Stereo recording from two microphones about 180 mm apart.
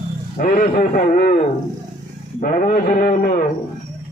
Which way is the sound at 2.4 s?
50° left (ahead or behind).